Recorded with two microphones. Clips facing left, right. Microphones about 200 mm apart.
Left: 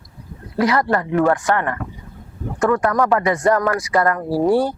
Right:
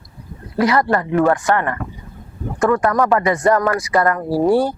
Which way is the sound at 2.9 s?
15° right (ahead or behind).